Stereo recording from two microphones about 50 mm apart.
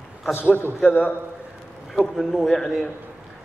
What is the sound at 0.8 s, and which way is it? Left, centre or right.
Speech, left.